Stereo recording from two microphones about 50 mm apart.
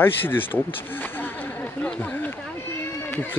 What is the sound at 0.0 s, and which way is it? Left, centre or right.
Speech, left.